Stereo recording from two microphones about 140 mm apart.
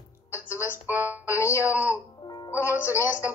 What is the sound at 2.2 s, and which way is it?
Music, 30° left (ahead or behind).